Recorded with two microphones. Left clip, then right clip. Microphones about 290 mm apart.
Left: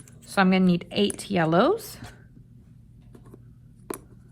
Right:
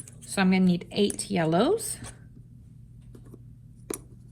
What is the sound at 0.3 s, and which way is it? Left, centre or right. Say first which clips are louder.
A woman's voice: left 4 dB; centre.